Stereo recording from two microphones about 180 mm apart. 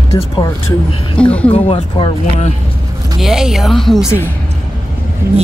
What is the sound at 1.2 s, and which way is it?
Speech, 5° left (ahead or behind).